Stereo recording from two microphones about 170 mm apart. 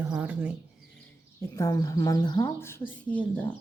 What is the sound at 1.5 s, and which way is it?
Speech, 20° left (ahead or behind).